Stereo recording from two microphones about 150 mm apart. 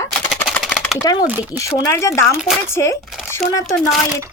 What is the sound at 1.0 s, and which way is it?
Speech, 25° left (ahead or behind).